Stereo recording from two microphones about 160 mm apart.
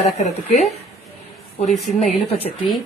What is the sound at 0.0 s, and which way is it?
Speech, 45° left (ahead or behind).